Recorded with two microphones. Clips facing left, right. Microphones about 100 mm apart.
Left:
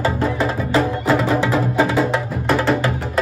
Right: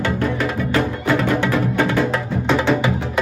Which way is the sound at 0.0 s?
30° left (ahead or behind).